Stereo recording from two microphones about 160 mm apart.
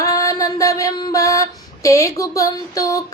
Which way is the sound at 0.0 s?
20° left (ahead or behind).